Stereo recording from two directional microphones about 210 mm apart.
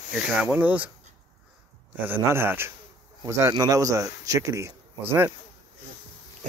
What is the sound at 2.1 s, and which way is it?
Speech, 10° right (ahead or behind).